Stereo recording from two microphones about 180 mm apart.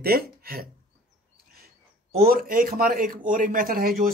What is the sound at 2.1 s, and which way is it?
A woman's voice, 55° right (ahead or behind).